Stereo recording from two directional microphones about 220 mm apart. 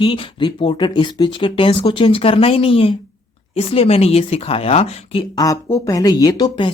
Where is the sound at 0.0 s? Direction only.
25° left (ahead or behind).